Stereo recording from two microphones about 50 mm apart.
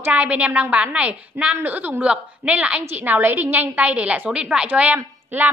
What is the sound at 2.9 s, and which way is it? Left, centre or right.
A woman's voice, right.